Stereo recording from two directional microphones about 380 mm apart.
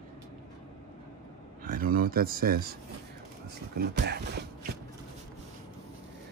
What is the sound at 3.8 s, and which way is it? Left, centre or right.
Speech, right.